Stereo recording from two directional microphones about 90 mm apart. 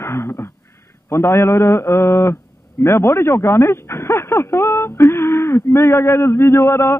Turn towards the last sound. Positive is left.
turn(degrees=30)  # may be behind; listen again after turning